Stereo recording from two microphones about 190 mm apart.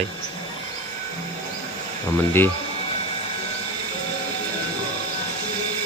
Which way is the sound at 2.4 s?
10° left (ahead or behind).